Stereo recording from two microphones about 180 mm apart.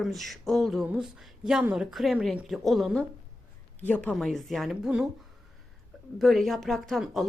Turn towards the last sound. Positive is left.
turn(degrees=0)  # may be behind; listen again after turning